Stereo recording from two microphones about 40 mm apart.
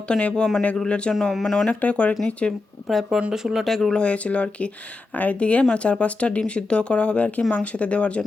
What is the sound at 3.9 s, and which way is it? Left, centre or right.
Speech, left.